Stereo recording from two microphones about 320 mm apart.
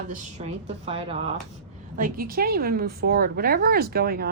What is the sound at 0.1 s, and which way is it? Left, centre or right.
A woman's voice, right.